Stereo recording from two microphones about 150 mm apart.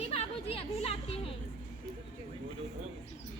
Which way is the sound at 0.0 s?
40° left (ahead or behind).